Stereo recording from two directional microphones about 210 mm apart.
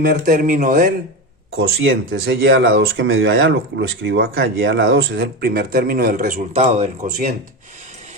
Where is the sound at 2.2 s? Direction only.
60° right (ahead or behind); by 6.5 s 40° right (ahead or behind).